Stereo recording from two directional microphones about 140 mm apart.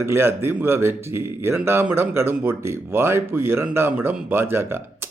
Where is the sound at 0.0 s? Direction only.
15° right (ahead or behind).